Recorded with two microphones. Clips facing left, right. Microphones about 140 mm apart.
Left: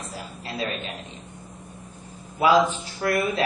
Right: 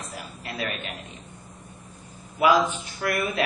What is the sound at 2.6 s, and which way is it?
Speech, 30° left (ahead or behind).